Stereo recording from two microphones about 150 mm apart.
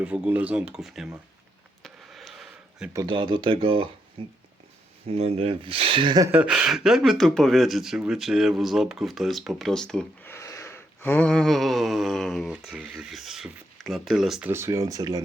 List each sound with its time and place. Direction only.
0.0 s speech: 10° right (ahead or behind)
1.8 s a sound: centre (ahead or behind)
3.1 s speech: 35° right (ahead or behind)
6.3 s speech: 10° right (ahead or behind)
10.3 s a sound: 20° left (ahead or behind); by 14.5 s 5° right (ahead or behind)
14.5 s speech: 20° right (ahead or behind)